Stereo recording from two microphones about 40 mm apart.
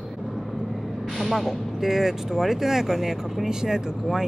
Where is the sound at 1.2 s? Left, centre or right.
Centre.